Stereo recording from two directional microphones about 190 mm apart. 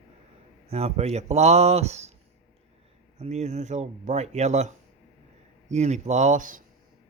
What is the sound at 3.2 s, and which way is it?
Speech, 35° right (ahead or behind).